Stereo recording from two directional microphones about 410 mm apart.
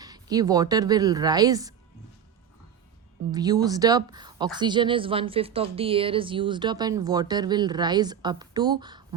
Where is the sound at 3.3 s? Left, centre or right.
Centre.